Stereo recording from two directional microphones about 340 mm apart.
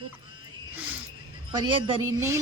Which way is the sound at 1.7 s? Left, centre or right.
Centre.